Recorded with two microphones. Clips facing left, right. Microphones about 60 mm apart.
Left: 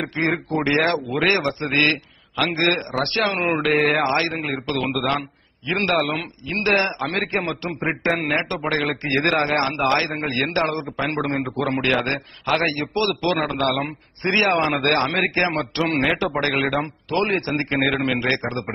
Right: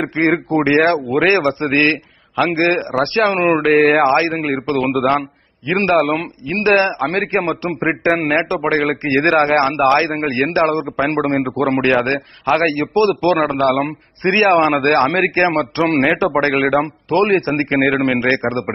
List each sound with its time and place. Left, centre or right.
0.2 s a man's voice: right
3.3 s a man's voice: right